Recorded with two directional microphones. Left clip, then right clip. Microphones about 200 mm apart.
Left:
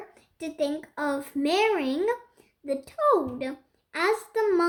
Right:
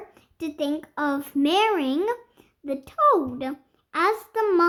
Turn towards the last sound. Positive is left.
turn(degrees=-45)  # may be behind; listen again after turning